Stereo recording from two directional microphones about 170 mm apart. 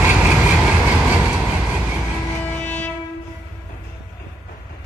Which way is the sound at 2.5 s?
10° left (ahead or behind).